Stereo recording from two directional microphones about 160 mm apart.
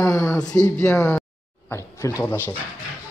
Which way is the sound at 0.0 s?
15° left (ahead or behind).